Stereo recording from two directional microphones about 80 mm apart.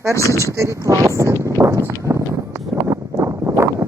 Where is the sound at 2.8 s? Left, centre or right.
Right.